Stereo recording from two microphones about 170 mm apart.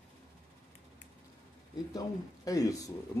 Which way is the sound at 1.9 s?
20° left (ahead or behind).